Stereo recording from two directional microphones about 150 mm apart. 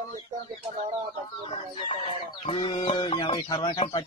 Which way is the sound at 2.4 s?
35° left (ahead or behind).